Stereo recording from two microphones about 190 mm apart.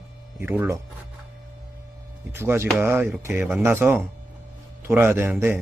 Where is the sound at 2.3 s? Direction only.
15° right (ahead or behind).